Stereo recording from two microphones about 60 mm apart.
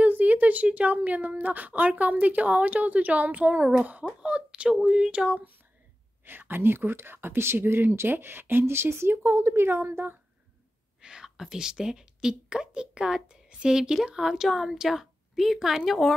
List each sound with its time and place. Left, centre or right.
0.0 s a woman's voice: right
6.2 s speech: right
11.0 s a woman's voice: centre